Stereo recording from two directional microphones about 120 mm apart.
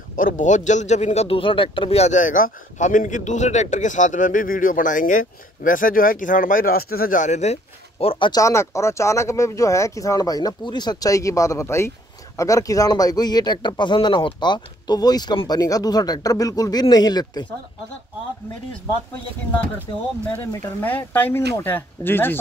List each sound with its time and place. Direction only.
0.2 s a man's voice: 90° left
7.2 s speech: 75° left (ahead or behind)
8.0 s speech: 50° left (ahead or behind)
8.3 s speech: 25° left (ahead or behind)
20.3 s speech: 15° left (ahead or behind)